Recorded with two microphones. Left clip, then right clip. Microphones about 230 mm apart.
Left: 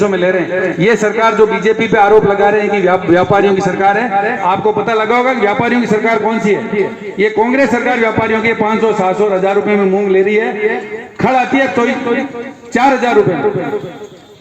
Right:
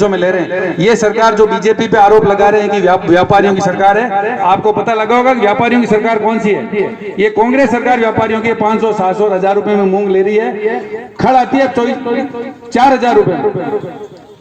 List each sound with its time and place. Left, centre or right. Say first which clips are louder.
0.0 s a man's voice: right 1 dB; right